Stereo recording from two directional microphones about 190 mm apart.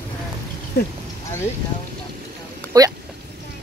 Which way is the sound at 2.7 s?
20° right (ahead or behind).